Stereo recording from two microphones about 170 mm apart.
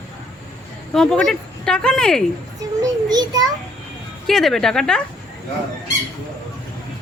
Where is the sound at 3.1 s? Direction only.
20° right (ahead or behind).